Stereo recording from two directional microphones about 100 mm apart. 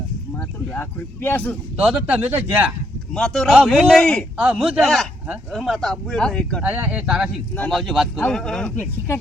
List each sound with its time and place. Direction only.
0.8 s speech: 20° left (ahead or behind)
1.8 s speech: 15° right (ahead or behind)
3.1 s speech: 5° left (ahead or behind)
6.6 s speech: 15° right (ahead or behind)
8.3 s speech: 5° left (ahead or behind)
8.6 s speech: 15° left (ahead or behind)